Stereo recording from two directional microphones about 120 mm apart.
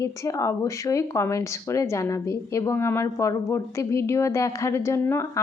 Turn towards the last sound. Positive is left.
turn(degrees=20)  # may be behind; listen again after turning